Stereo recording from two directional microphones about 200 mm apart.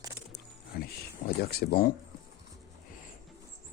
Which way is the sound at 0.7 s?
50° left (ahead or behind).